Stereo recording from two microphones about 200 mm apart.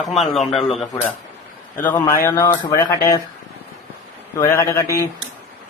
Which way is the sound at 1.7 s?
15° left (ahead or behind).